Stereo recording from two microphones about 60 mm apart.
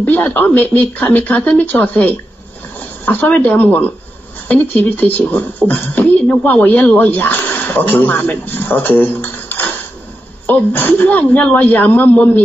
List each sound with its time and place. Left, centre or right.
0.0 s speech: left